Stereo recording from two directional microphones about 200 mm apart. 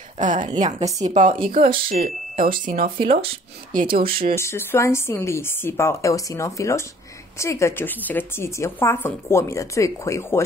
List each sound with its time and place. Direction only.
0.2 s a woman's voice: 40° right (ahead or behind)
4.4 s a woman's voice: 15° left (ahead or behind)